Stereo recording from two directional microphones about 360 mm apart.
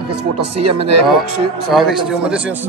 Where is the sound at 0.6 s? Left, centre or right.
Right.